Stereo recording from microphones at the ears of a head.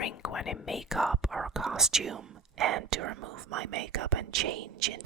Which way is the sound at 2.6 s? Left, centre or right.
Right.